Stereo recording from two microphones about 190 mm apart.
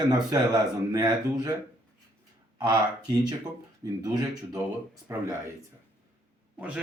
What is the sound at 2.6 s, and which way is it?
Speech, 20° right (ahead or behind).